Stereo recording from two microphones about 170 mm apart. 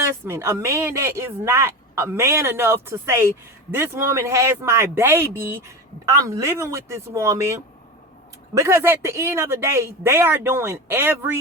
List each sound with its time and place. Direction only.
0.0 s speech: 15° right (ahead or behind)